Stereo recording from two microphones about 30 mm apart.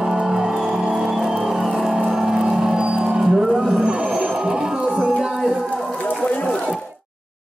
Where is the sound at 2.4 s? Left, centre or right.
Right.